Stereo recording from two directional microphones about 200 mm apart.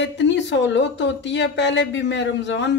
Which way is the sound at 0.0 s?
60° left (ahead or behind).